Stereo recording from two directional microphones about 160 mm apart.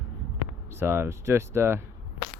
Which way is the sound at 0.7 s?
15° right (ahead or behind).